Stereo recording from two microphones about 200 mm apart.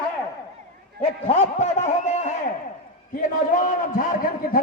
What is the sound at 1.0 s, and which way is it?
A man's voice, 30° left (ahead or behind).